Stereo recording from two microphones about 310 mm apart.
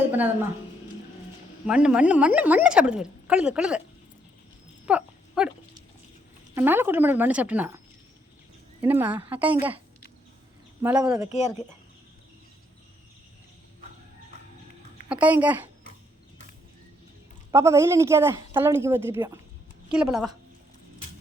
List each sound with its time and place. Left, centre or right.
1.6 s speech: centre
4.9 s a sound: centre
6.5 s a woman's voice: centre
8.8 s speech: centre
10.8 s speech: centre
11.3 s speech: left
15.1 s speech: centre
17.5 s a woman's voice: centre